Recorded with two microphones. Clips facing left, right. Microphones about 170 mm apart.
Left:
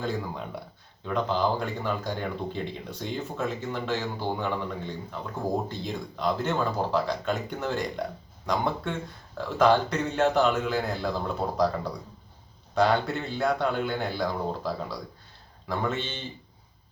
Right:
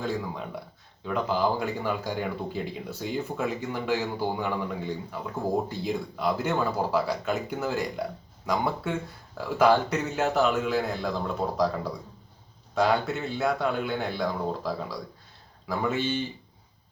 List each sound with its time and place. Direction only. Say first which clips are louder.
0.0 s a man's voice: even; centre (ahead or behind)
12.7 s a man's voice: left 1 dB; centre (ahead or behind)